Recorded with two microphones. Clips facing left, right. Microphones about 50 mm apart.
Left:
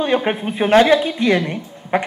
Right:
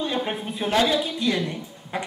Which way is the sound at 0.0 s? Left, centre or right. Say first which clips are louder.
Left 8 dB; left.